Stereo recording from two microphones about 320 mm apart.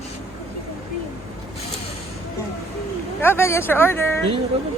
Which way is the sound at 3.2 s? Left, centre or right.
Centre.